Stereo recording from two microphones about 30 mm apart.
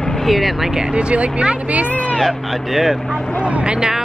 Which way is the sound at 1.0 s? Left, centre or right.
Right.